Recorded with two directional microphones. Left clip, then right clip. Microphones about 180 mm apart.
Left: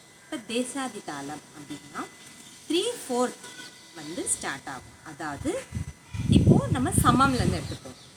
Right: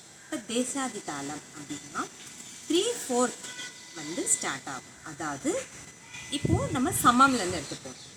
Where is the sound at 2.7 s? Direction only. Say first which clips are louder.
Even; centre (ahead or behind).